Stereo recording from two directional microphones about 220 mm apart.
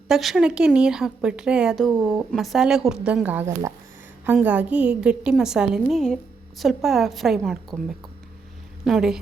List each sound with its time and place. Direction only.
0.1 s speech: centre (ahead or behind)
8.8 s a woman's voice: centre (ahead or behind)